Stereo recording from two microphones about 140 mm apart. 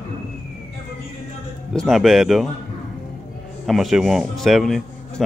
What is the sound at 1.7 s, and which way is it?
Speech, centre (ahead or behind).